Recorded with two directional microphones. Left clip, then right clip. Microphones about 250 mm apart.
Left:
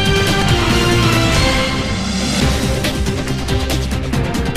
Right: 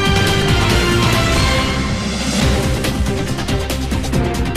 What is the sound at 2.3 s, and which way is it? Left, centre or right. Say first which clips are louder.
Music: right 1 dB; centre.